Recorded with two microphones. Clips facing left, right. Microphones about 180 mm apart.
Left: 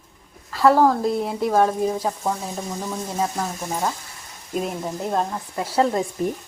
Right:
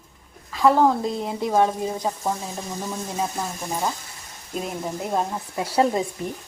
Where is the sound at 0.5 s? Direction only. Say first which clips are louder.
Left 2 dB; 5° left (ahead or behind).